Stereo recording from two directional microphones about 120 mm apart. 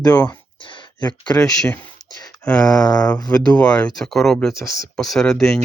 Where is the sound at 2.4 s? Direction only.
5° left (ahead or behind).